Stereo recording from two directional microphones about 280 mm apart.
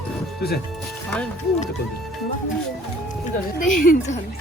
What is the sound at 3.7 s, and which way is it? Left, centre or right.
Speech, left.